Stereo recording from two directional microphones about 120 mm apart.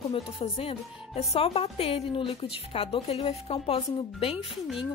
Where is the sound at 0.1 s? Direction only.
55° left (ahead or behind).